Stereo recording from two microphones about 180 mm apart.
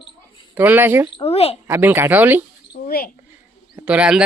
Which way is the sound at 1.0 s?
30° left (ahead or behind).